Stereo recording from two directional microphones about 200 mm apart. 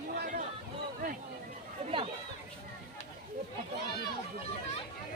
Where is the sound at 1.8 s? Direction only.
30° right (ahead or behind).